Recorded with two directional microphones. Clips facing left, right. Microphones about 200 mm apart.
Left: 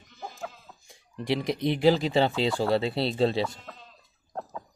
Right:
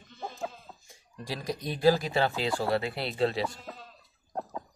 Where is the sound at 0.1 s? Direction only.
30° right (ahead or behind).